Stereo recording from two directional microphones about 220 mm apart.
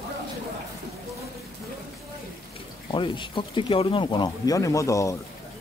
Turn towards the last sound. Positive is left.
turn(degrees=15)  # may be behind; listen again after turning